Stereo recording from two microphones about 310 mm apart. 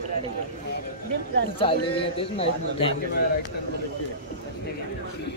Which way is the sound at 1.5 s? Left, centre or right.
Centre.